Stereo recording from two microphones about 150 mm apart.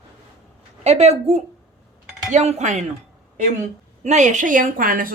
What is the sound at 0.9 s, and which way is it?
Speech, 45° right (ahead or behind).